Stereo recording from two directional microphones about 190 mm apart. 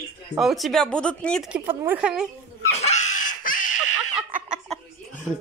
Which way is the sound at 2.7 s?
35° left (ahead or behind).